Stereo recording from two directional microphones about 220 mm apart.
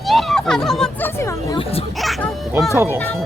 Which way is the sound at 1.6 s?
25° left (ahead or behind).